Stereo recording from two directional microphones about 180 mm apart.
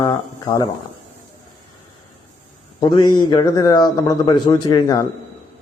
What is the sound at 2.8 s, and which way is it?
A man's voice, 25° left (ahead or behind).